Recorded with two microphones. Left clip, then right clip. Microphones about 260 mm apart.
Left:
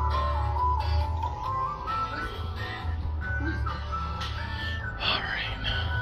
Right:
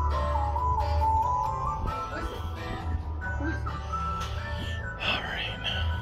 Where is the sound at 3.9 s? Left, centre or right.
Centre.